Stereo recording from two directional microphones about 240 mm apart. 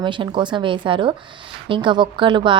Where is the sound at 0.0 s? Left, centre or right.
Centre.